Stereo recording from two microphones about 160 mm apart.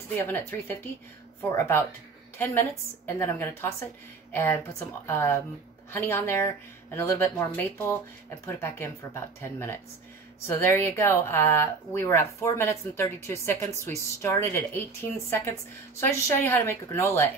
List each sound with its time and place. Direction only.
0.3 s speech: 15° left (ahead or behind)
2.3 s a woman's voice: 15° left (ahead or behind)